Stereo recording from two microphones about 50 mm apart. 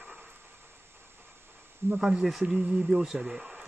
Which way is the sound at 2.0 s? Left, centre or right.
Centre.